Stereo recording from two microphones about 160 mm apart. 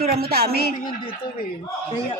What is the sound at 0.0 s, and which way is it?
Speech, 75° right (ahead or behind).